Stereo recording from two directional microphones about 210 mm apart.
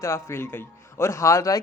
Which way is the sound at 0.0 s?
15° left (ahead or behind).